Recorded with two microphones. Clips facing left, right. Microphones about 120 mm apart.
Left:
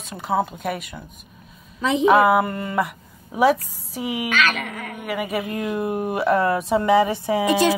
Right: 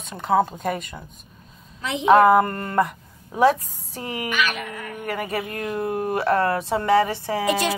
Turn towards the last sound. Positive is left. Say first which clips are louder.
# left 2 dB
turn(degrees=15)  # may be behind; listen again after turning